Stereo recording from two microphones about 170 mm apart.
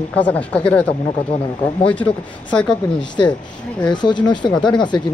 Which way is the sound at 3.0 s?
25° left (ahead or behind).